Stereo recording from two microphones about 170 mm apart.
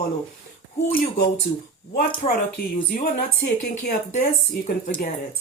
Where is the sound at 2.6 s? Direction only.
60° left (ahead or behind).